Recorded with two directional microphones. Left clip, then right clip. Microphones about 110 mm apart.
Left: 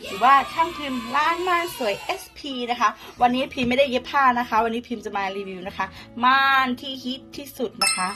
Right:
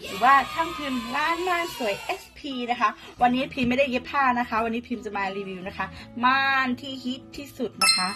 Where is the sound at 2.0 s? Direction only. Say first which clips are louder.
Left 2 dB; 25° right (ahead or behind).